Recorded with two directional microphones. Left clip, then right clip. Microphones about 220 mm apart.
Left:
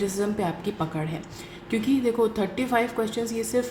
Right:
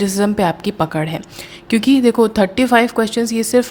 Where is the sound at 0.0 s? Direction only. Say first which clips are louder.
Right 10 dB; 45° right (ahead or behind).